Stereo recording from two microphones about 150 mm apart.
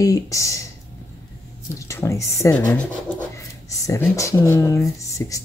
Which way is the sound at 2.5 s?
10° left (ahead or behind).